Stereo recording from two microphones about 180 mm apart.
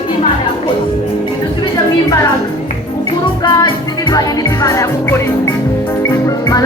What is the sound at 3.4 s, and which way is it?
Music, 25° left (ahead or behind).